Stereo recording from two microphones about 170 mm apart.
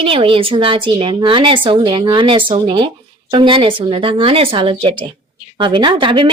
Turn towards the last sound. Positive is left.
turn(degrees=-30)  # may be behind; listen again after turning